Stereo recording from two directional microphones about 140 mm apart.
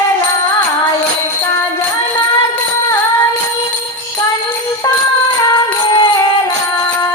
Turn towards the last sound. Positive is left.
turn(degrees=25)  # may be behind; listen again after turning